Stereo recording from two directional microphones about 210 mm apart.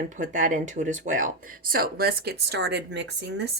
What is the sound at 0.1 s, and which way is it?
Speech, 40° right (ahead or behind).